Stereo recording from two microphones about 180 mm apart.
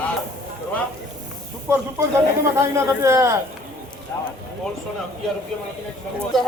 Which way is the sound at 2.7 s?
15° right (ahead or behind).